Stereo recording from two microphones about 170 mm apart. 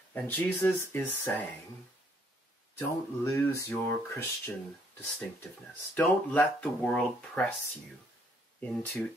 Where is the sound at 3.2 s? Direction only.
15° left (ahead or behind).